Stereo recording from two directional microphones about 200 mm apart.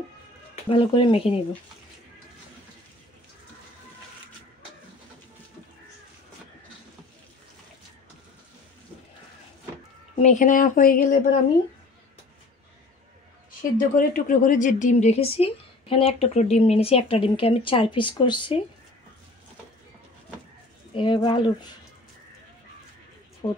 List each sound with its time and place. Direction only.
0.7 s speech: 25° left (ahead or behind)
10.2 s speech: 40° left (ahead or behind)
13.5 s speech: 45° left (ahead or behind); by 18.6 s 25° left (ahead or behind)
20.9 s speech: 25° left (ahead or behind)
23.4 s speech: 25° left (ahead or behind)